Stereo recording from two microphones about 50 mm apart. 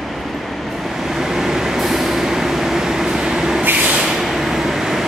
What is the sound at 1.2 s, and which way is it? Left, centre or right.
Vehicle, centre.